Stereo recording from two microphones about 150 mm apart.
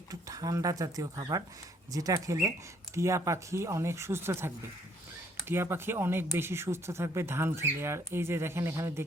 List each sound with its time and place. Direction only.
0.1 s speech: 25° right (ahead or behind)